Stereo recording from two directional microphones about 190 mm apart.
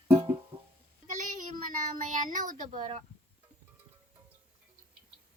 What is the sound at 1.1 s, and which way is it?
Child singing, 40° right (ahead or behind).